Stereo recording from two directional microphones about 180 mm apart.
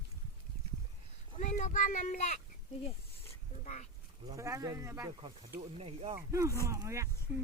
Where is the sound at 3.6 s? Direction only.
40° left (ahead or behind).